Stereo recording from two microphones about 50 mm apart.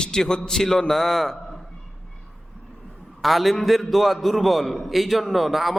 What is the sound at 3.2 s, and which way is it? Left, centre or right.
A man's voice, centre.